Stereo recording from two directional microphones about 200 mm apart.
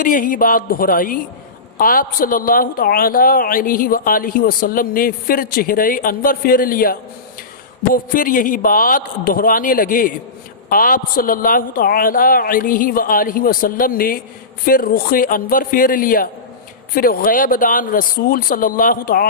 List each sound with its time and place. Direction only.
0.0 s a woman's voice: 40° left (ahead or behind)